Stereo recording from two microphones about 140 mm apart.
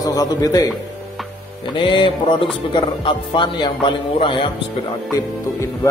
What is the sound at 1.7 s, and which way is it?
Speech, 35° left (ahead or behind).